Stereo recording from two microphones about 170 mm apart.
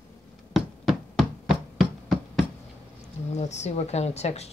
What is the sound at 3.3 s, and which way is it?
Speech, 40° left (ahead or behind).